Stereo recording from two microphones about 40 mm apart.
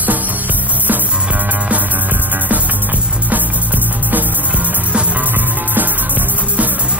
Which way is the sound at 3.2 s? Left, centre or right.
Right.